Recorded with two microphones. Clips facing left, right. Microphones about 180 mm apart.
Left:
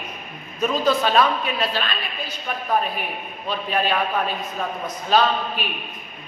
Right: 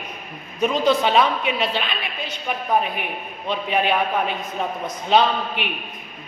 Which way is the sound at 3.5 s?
20° right (ahead or behind).